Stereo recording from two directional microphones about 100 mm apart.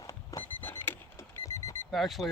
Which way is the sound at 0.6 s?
20° left (ahead or behind).